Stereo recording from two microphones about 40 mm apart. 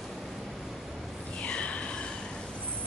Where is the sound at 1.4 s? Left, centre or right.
Left.